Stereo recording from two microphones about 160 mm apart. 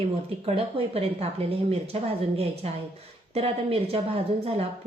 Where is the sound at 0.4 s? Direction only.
40° right (ahead or behind).